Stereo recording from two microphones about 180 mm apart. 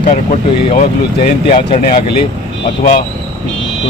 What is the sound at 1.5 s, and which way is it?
Speech, 30° left (ahead or behind).